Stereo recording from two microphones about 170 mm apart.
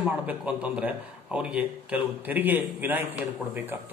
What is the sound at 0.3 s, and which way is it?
Speech, 10° right (ahead or behind).